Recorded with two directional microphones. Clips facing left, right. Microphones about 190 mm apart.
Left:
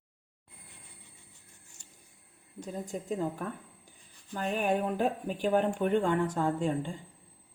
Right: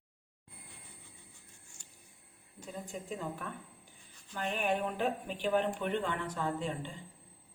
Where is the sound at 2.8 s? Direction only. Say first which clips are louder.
Left 7 dB; 40° left (ahead or behind).